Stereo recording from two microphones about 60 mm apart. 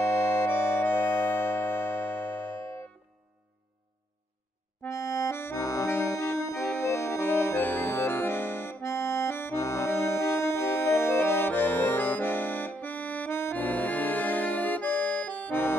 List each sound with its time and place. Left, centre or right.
0.0 s organ: left
4.8 s accordion: left
5.6 s accordion: left
5.9 s accordion: left
6.4 s organ: left
7.6 s accordion: left
8.8 s accordion: left
9.5 s music: left
9.8 s music: left